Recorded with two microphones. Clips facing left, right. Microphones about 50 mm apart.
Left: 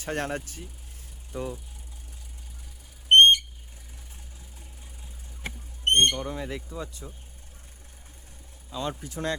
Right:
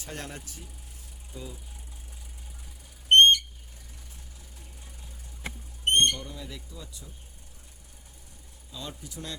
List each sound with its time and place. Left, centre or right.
0.0 s speech: left
3.1 s a sound: centre
5.8 s speech: left
8.7 s speech: left